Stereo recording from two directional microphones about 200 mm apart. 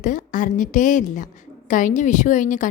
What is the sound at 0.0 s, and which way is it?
A woman's voice, 40° left (ahead or behind).